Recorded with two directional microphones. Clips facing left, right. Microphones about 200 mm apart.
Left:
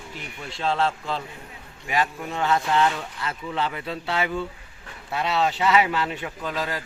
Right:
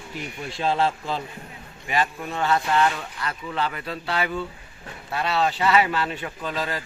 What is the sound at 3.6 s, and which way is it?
A man's voice, 20° left (ahead or behind).